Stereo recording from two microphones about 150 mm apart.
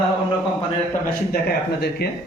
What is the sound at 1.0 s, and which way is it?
Speech, 90° left.